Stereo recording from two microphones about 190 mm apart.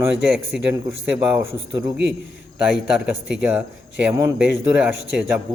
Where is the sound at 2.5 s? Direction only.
5° right (ahead or behind).